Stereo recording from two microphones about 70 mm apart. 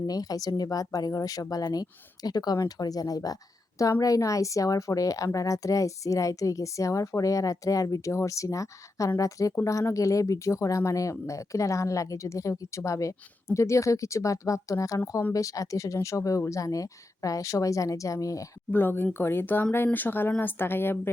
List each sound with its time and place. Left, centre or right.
0.1 s speech: left
18.7 s speech: left